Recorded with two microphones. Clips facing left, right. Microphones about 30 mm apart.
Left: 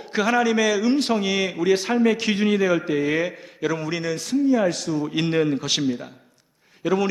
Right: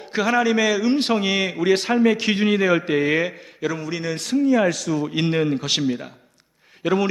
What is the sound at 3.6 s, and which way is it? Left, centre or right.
Speech, centre.